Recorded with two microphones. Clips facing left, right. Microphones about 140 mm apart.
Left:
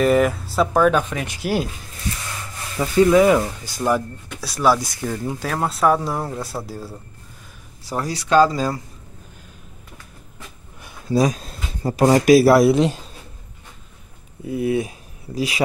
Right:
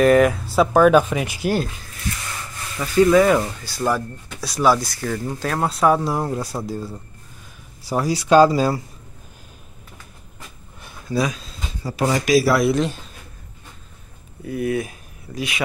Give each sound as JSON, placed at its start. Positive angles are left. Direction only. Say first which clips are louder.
{"t": 0.0, "sound": "speech", "louder": "right 2 dB", "side_deg": 0}
{"t": 2.8, "sound": "speech", "louder": "even", "side_deg": 20}
{"t": 3.1, "sound": "speech", "louder": "left 1 dB", "side_deg": 5}
{"t": 4.4, "sound": "speech", "louder": "even", "side_deg": 5}
{"t": 4.7, "sound": "speech", "louder": "right 1 dB", "side_deg": 15}
{"t": 7.9, "sound": "speech", "louder": "right 3 dB", "side_deg": -10}
{"t": 11.1, "sound": "speech", "louder": "left 4 dB", "side_deg": 40}
{"t": 14.4, "sound": "speech", "louder": "left 2 dB", "side_deg": 25}